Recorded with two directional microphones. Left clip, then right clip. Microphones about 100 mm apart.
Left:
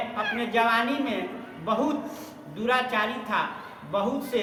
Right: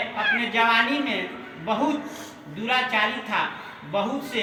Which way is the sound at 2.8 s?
20° left (ahead or behind).